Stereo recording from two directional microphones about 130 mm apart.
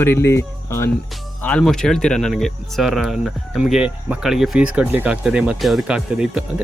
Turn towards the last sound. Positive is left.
turn(degrees=-5)  # may be behind; listen again after turning